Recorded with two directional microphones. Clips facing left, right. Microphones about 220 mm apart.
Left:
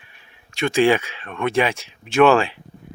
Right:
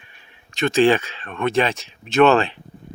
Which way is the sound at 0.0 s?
10° left (ahead or behind).